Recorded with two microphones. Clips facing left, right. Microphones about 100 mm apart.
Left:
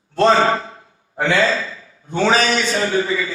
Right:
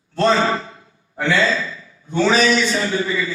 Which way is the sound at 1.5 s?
30° left (ahead or behind).